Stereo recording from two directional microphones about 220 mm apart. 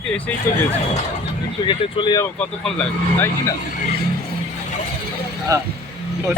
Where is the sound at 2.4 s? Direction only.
5° left (ahead or behind).